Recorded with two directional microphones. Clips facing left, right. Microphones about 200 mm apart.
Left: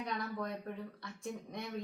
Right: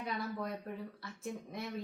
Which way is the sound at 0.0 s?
5° right (ahead or behind).